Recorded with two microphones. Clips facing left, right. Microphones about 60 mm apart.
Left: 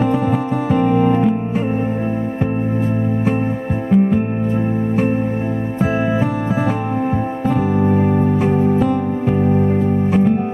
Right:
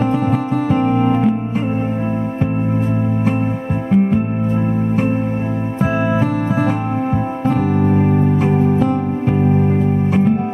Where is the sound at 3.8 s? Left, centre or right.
Centre.